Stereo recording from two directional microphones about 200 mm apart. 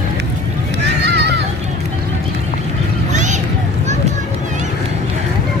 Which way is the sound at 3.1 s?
35° right (ahead or behind).